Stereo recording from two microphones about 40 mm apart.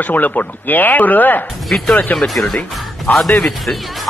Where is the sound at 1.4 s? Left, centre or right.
Centre.